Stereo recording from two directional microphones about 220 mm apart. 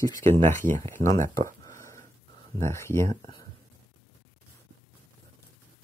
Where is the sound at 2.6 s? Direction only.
10° left (ahead or behind).